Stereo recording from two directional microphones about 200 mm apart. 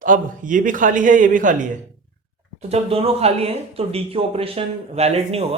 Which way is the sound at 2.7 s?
30° right (ahead or behind).